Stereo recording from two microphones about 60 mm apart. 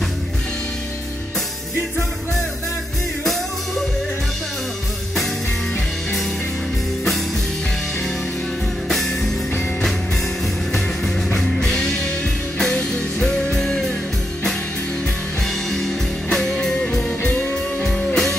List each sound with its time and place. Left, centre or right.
8.8 s music: centre
11.3 s music: centre
13.2 s music: centre
16.3 s music: centre
17.2 s music: left
17.8 s music: centre